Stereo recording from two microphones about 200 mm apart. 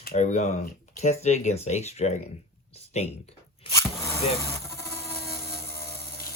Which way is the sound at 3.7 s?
15° left (ahead or behind).